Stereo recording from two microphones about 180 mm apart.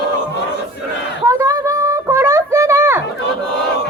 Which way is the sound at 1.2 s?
20° right (ahead or behind).